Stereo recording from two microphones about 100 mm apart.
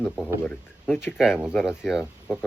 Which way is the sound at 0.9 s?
5° right (ahead or behind).